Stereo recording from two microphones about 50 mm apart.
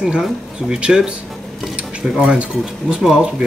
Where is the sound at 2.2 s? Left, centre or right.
Right.